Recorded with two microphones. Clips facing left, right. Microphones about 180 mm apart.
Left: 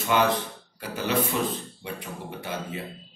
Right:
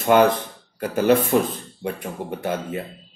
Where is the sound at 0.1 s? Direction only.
50° right (ahead or behind).